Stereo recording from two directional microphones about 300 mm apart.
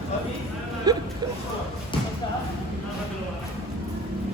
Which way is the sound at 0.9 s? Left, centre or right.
Centre.